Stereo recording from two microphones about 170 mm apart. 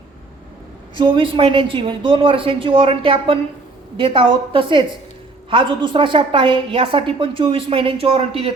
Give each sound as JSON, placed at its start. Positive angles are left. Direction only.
{"t": 0.9, "sound": "a woman's voice", "side_deg": -30}